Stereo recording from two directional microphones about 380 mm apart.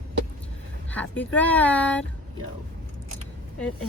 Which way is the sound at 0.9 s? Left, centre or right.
Centre.